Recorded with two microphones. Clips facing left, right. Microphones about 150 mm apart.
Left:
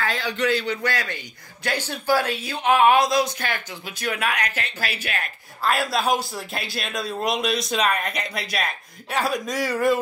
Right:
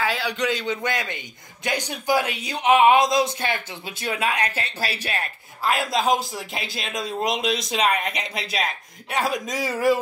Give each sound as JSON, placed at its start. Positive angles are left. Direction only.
{"t": 0.0, "sound": "a man's voice", "side_deg": -10}
{"t": 5.6, "sound": "a man's voice", "side_deg": -15}